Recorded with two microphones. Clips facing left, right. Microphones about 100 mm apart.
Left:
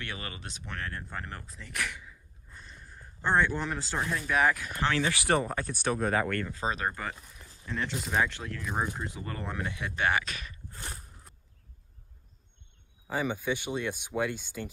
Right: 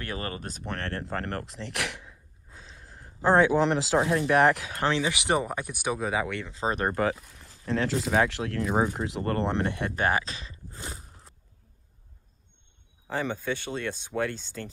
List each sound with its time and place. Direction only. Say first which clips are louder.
0.0 s speech: right 6 dB; 40° right (ahead or behind)
0.7 s speech: right 5 dB; 75° right (ahead or behind)
3.3 s speech: right 7 dB; 90° right
4.1 s speech: right 4 dB; 55° right (ahead or behind)
5.0 s speech: right 1 dB; 15° right (ahead or behind)
7.0 s speech: right 11 dB; 65° right (ahead or behind)
7.7 s speech: right 6 dB; 90° right; by 8.8 s 60° right (ahead or behind)
9.0 s speech: right 9 dB; 75° right (ahead or behind); by 10.5 s 30° right (ahead or behind)
13.1 s speech: right 1 dB; 10° left (ahead or behind)